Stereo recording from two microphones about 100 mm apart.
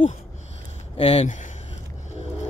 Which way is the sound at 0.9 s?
90° left.